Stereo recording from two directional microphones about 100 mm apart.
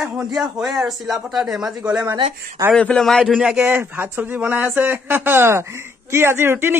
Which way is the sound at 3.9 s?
20° right (ahead or behind).